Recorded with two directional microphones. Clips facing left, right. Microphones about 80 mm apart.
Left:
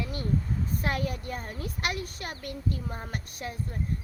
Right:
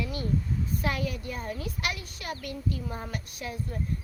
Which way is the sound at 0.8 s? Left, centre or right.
Left.